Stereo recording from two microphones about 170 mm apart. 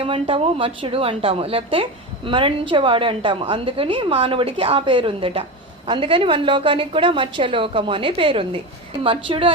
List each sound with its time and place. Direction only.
0.0 s a woman's voice: 35° right (ahead or behind)